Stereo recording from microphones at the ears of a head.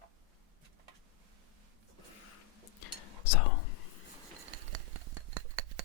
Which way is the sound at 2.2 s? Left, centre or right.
Left.